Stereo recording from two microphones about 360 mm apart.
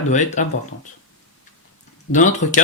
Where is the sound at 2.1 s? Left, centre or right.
Left.